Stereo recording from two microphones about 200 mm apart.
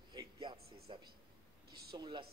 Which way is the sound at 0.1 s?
20° right (ahead or behind).